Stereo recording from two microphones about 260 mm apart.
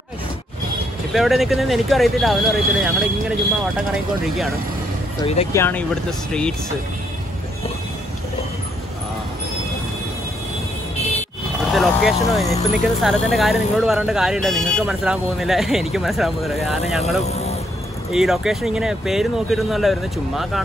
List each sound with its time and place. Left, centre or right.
1.1 s speech: centre
5.2 s speech: left
5.5 s speech: centre
11.7 s speech: centre
17.3 s vehicle: left
18.1 s speech: centre